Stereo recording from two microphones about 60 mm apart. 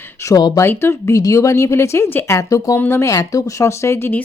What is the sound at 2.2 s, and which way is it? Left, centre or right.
Speech, left.